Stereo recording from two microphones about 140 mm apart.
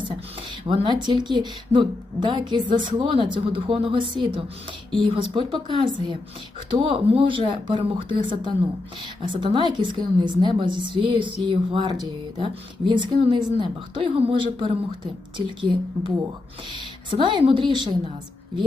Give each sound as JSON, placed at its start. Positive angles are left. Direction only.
{"t": 0.7, "sound": "speech", "side_deg": -25}
{"t": 9.2, "sound": "speech", "side_deg": -35}